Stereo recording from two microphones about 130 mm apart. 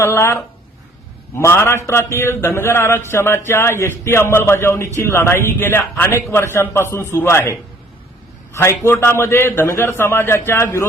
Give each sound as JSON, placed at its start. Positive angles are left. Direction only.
{"t": 0.0, "sound": "a man's voice", "side_deg": 20}